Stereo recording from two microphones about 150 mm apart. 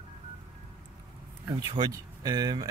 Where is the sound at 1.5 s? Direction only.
30° right (ahead or behind).